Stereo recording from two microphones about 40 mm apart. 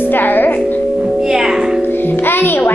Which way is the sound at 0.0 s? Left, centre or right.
Left.